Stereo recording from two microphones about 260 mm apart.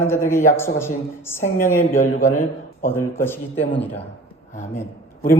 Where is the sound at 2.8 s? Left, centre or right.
Centre.